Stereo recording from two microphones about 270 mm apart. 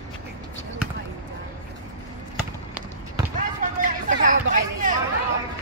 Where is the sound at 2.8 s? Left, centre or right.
Centre.